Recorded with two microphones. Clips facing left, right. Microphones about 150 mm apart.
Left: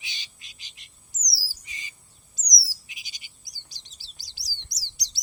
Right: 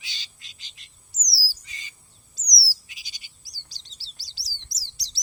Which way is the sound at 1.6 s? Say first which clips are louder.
Left 1 dB; 20° left (ahead or behind).